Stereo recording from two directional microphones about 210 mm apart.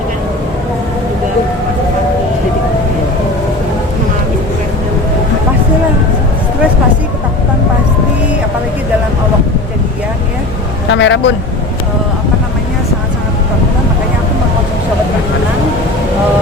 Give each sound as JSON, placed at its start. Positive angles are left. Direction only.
{"t": 10.9, "sound": "vehicle", "side_deg": 60}